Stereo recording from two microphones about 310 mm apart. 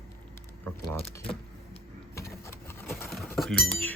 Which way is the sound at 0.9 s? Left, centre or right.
Centre.